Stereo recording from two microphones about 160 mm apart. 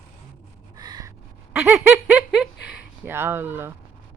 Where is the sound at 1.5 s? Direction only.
10° right (ahead or behind).